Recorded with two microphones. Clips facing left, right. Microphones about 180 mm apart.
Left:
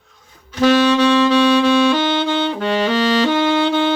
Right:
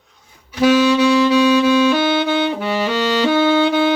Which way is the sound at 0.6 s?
10° right (ahead or behind).